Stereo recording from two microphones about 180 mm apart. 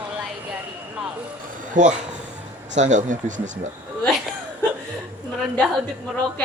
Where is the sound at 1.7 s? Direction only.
40° right (ahead or behind).